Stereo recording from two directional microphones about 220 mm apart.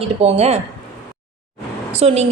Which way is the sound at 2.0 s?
30° right (ahead or behind).